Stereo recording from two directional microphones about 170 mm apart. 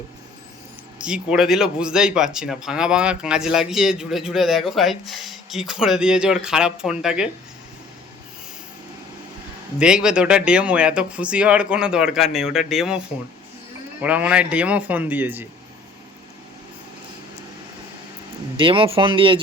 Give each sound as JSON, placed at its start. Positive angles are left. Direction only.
{"t": 1.0, "sound": "speech", "side_deg": -5}
{"t": 9.7, "sound": "speech", "side_deg": -5}
{"t": 14.0, "sound": "speech", "side_deg": -10}
{"t": 18.5, "sound": "speech", "side_deg": -30}